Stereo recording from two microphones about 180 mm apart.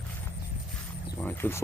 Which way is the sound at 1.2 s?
10° left (ahead or behind).